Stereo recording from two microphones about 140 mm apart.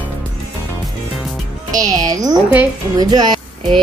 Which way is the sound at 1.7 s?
25° right (ahead or behind).